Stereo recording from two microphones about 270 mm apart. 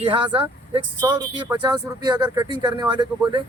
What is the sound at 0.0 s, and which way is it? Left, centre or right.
Speech, centre.